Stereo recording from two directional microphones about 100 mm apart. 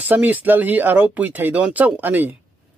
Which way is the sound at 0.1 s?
15° right (ahead or behind).